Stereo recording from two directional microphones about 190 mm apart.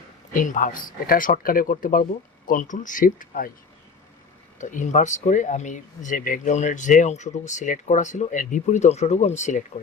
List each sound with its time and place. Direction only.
0.3 s speech: 45° left (ahead or behind)
4.5 s speech: 40° left (ahead or behind)